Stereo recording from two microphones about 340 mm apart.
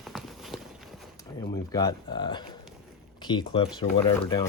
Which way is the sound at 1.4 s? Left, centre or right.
Centre.